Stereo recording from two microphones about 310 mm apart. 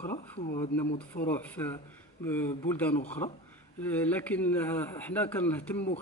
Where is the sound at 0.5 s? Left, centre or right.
Centre.